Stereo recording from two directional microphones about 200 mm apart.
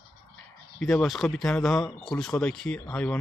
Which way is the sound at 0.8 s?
5° left (ahead or behind).